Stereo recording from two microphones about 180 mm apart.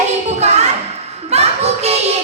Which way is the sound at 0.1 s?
40° right (ahead or behind).